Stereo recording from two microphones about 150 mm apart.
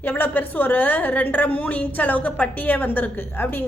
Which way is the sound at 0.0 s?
10° left (ahead or behind).